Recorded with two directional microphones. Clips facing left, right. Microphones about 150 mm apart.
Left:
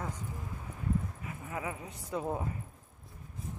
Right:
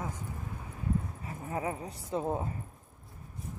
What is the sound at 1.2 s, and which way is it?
Speech, 35° right (ahead or behind).